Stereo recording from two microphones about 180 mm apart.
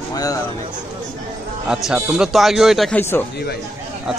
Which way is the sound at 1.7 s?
5° right (ahead or behind).